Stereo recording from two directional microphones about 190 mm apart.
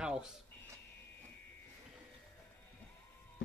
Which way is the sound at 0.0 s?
5° right (ahead or behind).